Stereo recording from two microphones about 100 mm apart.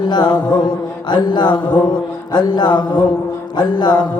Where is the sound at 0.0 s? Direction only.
45° left (ahead or behind).